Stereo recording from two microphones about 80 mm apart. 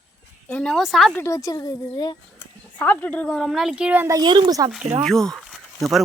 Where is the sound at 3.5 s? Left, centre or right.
Centre.